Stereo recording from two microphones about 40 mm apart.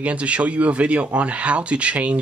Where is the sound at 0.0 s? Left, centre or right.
Right.